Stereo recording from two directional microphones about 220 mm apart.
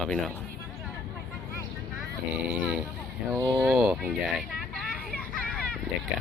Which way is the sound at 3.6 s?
5° right (ahead or behind).